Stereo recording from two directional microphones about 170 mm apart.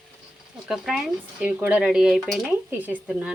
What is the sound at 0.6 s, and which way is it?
A woman's voice, centre (ahead or behind).